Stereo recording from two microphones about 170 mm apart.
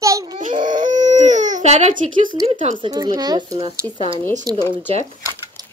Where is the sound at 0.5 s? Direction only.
25° right (ahead or behind).